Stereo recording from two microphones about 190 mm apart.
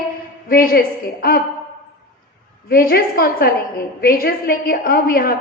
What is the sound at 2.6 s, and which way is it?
A woman's voice, 55° left (ahead or behind).